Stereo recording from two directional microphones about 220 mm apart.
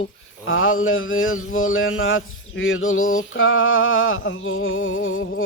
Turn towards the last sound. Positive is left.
turn(degrees=65)  # may be behind; listen again after turning